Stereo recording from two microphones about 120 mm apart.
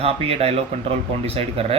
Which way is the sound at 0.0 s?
55° right (ahead or behind).